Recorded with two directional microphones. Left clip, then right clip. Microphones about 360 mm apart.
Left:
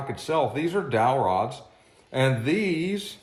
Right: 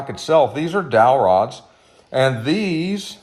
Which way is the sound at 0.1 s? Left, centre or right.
Right.